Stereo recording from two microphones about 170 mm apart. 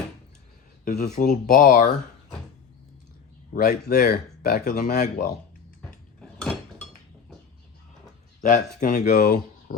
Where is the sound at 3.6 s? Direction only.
60° left (ahead or behind); by 5.3 s 45° left (ahead or behind).